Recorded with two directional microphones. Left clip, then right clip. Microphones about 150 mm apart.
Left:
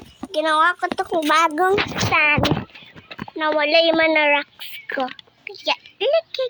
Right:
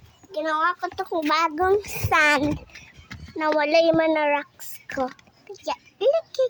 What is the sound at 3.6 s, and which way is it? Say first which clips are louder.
Speech: left 3 dB; 15° right (ahead or behind).